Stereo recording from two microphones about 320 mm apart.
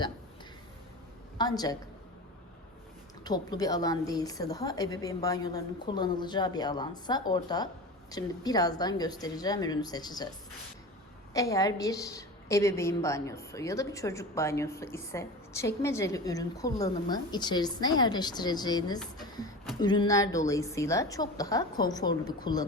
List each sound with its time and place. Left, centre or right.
1.4 s a woman's voice: centre
3.2 s a woman's voice: centre
11.3 s a woman's voice: centre